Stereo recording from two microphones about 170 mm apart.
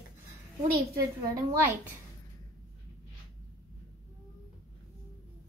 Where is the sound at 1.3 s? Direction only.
20° right (ahead or behind).